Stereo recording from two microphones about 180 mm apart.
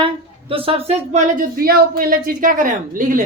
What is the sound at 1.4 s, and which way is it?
A woman's voice, 55° right (ahead or behind).